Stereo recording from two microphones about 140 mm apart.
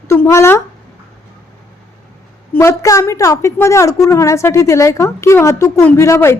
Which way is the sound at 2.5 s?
20° left (ahead or behind).